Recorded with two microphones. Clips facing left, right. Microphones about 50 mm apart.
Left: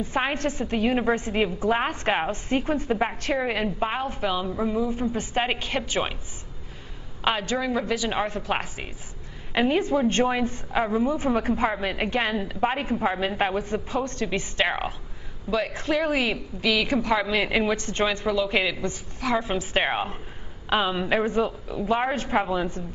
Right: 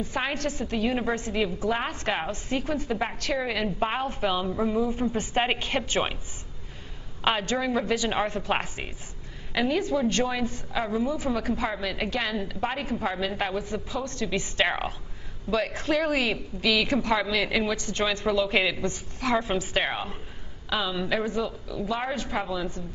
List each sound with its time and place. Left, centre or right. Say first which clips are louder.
0.0 s a woman's voice: left 3 dB; left
0.9 s a woman's voice: left 4 dB; centre
3.6 s a woman's voice: left 1 dB; centre
7.2 s a woman's voice: left 1 dB; centre
9.5 s a woman's voice: left 3 dB; left
14.6 s a woman's voice: left 1 dB; centre
17.3 s a woman's voice: left 3 dB; left
18.2 s a woman's voice: even; centre
19.6 s a woman's voice: left 3 dB; centre; by 22.8 s left